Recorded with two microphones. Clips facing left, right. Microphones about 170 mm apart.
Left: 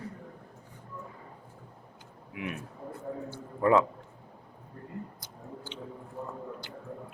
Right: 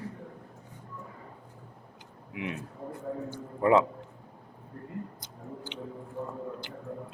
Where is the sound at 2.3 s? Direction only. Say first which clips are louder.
Right 1 dB; 20° right (ahead or behind).